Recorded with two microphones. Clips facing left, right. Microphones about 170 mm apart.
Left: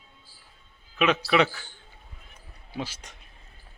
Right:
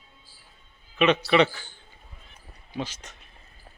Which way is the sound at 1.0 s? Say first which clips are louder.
Right 2 dB; centre (ahead or behind).